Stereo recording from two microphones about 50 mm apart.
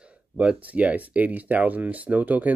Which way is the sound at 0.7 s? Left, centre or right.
Right.